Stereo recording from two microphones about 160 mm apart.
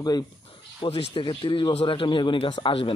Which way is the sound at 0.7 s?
35° left (ahead or behind).